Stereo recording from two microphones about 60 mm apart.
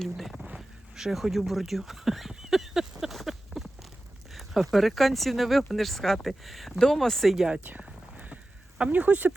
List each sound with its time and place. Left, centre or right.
0.0 s speech: centre
2.3 s a sound: centre
4.3 s speech: centre
7.3 s speech: centre
7.6 s speech: right
8.9 s speech: right